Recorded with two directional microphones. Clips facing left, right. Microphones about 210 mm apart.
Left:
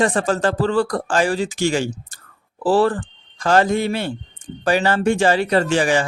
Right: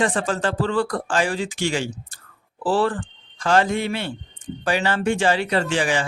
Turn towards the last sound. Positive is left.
turn(degrees=40)  # may be behind; listen again after turning